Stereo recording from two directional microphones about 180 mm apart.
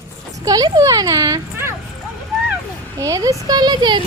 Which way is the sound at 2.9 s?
20° right (ahead or behind).